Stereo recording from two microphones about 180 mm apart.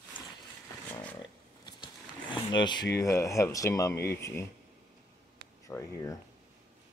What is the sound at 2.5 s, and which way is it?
Speech, 25° left (ahead or behind).